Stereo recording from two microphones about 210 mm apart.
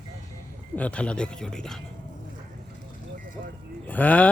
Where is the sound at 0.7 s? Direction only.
5° left (ahead or behind).